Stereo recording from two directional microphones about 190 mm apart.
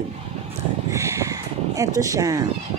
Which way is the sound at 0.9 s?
15° right (ahead or behind).